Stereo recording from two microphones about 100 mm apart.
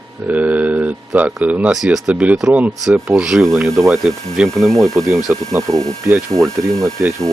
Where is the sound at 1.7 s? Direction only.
5° right (ahead or behind).